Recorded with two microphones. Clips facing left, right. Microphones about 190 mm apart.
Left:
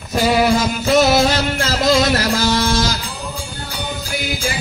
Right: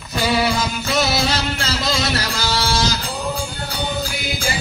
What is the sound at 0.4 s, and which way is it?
Music, 50° left (ahead or behind).